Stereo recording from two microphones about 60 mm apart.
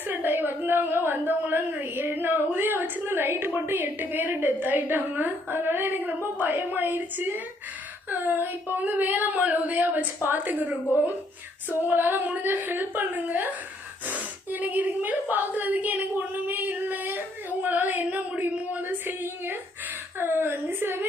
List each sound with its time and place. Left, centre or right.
0.1 s a woman's voice: right
11.7 s a woman's voice: right
14.5 s a woman's voice: right